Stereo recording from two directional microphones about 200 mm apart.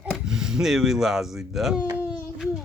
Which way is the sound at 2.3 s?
Centre (ahead or behind).